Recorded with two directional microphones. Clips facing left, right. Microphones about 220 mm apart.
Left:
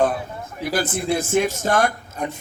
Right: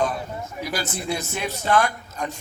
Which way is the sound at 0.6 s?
55° left (ahead or behind).